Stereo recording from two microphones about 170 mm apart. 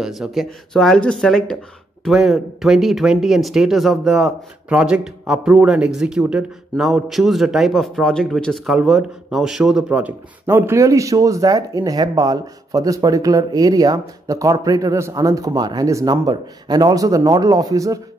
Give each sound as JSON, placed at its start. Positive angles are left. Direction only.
{"t": 0.0, "sound": "speech", "side_deg": 0}